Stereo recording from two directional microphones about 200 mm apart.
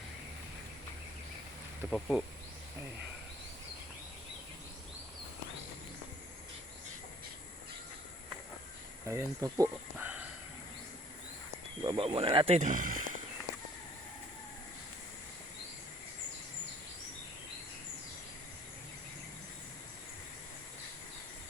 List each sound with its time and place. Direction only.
1.9 s speech: centre (ahead or behind)
9.0 s speech: 15° right (ahead or behind)
11.8 s speech: 25° right (ahead or behind); by 13.1 s 40° right (ahead or behind)